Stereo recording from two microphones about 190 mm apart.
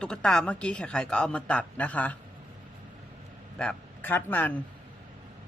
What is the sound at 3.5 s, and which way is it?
Speech, 10° left (ahead or behind).